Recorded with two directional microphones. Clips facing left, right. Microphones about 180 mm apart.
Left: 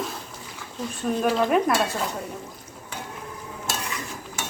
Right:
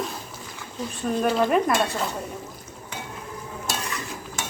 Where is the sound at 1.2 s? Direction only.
Centre (ahead or behind).